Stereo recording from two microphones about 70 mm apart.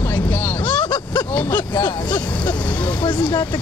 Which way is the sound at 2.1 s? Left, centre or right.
Left.